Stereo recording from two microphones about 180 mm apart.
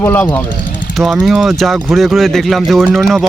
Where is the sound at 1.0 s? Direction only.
Centre (ahead or behind).